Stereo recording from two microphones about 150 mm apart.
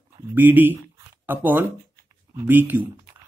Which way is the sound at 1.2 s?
15° right (ahead or behind).